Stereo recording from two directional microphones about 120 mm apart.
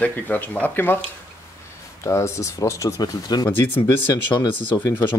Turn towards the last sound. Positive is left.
turn(degrees=40)  # may be behind; listen again after turning